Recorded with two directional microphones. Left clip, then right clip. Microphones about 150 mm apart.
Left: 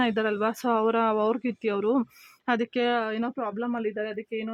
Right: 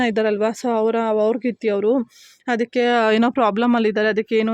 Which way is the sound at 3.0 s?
60° right (ahead or behind).